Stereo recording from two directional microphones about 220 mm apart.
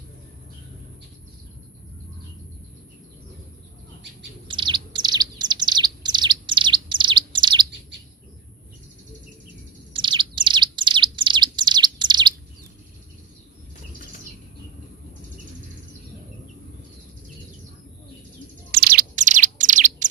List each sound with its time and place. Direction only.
4.4 s bird: 20° right (ahead or behind)
9.9 s bird: 20° right (ahead or behind)
18.7 s bird: 45° right (ahead or behind)